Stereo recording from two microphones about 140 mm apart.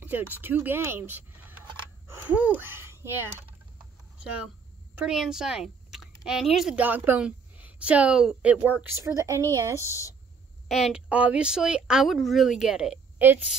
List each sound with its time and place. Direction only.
0.0 s speech: 15° right (ahead or behind)
3.7 s a sound: 10° right (ahead or behind)
4.9 s speech: 5° right (ahead or behind)
6.7 s a woman's voice: 10° right (ahead or behind)
9.8 s speech: 20° left (ahead or behind)
10.7 s speech: 5° right (ahead or behind)
13.2 s a woman's voice: 15° right (ahead or behind)